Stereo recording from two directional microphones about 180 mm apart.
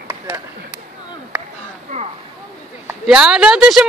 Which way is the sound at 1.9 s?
40° right (ahead or behind).